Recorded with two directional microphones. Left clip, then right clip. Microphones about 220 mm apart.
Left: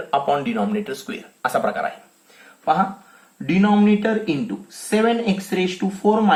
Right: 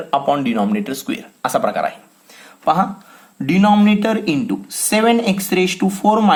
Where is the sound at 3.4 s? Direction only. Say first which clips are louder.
Right 4 dB; 40° right (ahead or behind).